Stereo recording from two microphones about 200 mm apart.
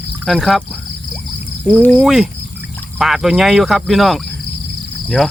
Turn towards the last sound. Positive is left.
turn(degrees=0)  # may be behind; listen again after turning